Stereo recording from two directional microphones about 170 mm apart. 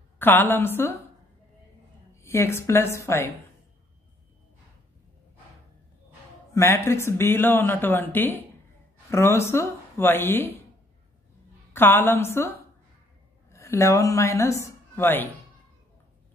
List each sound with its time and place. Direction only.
0.2 s speech: 10° left (ahead or behind)
2.2 s speech: 15° left (ahead or behind)
6.5 s speech: 15° left (ahead or behind)
11.7 s a woman's voice: 10° left (ahead or behind)